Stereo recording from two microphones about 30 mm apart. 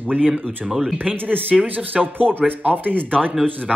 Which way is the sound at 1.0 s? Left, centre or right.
Right.